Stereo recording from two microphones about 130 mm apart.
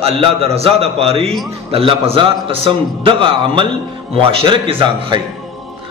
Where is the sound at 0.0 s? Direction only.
45° right (ahead or behind).